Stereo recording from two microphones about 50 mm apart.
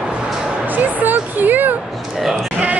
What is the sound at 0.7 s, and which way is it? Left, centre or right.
Speech, right.